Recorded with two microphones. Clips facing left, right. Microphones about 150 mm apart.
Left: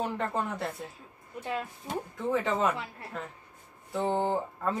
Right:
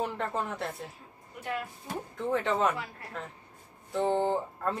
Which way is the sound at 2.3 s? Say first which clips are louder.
Even; centre (ahead or behind).